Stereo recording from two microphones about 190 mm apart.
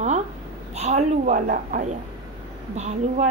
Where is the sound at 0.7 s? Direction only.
40° right (ahead or behind).